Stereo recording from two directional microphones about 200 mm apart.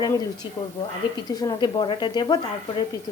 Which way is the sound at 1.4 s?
20° left (ahead or behind).